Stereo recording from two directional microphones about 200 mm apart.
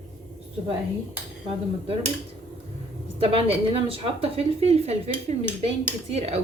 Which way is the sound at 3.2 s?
30° right (ahead or behind).